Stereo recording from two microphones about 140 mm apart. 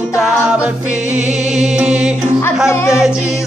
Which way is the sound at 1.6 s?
5° right (ahead or behind).